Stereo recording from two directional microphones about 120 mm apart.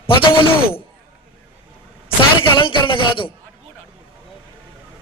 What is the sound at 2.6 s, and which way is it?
Speech, 45° left (ahead or behind).